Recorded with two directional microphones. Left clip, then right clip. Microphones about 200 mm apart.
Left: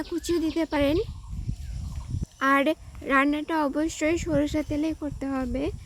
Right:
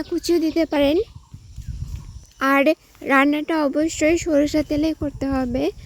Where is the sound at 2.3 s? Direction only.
25° right (ahead or behind).